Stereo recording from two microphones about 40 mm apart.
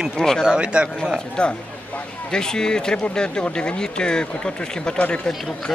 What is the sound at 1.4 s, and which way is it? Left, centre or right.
Speech, left.